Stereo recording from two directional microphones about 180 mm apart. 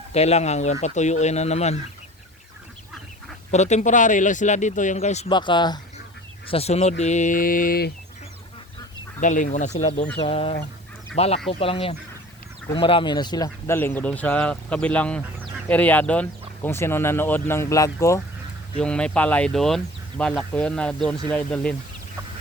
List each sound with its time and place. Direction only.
0.1 s speech: 35° left (ahead or behind)
3.5 s speech: 40° left (ahead or behind)
5.3 s speech: 25° left (ahead or behind)
6.5 s speech: 35° left (ahead or behind); by 7.9 s 60° left (ahead or behind)
9.2 s speech: 45° left (ahead or behind); by 18.2 s 15° left (ahead or behind)
18.8 s speech: 5° left (ahead or behind)